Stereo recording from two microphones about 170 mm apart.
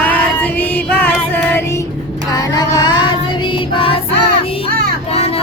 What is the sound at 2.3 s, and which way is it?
Vehicle, 25° left (ahead or behind).